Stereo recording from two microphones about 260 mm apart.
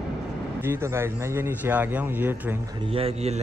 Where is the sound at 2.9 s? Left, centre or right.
Right.